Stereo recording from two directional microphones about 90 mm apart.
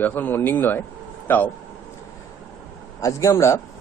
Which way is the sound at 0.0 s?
20° left (ahead or behind).